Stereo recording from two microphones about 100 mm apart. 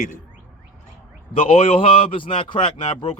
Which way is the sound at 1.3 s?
70° left (ahead or behind).